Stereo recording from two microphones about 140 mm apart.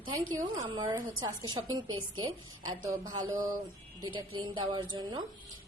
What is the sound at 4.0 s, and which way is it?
A woman's voice, 35° right (ahead or behind).